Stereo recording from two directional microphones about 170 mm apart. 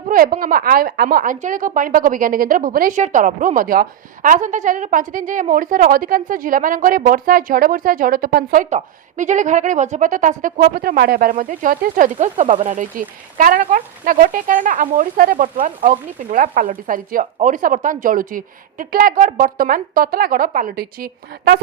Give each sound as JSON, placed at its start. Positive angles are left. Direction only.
{"t": 0.1, "sound": "a woman's voice", "side_deg": -55}